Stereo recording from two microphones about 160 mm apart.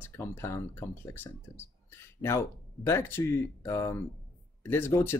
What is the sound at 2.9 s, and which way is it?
Speech, 15° left (ahead or behind).